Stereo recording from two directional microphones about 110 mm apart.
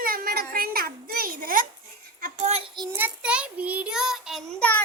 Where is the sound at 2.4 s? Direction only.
75° right (ahead or behind).